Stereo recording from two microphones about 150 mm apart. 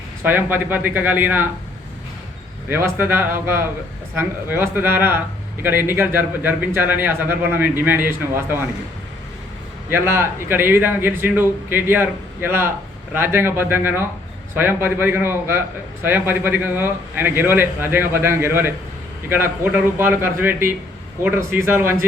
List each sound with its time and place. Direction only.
0.2 s speech: 15° right (ahead or behind)
2.6 s speech: 15° right (ahead or behind)
9.9 s speech: 15° right (ahead or behind)